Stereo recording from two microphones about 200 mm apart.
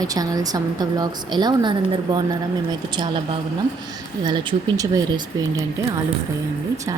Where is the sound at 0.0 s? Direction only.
20° right (ahead or behind).